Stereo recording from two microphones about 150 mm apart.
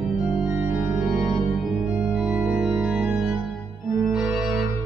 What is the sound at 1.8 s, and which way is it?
Organ, 10° right (ahead or behind).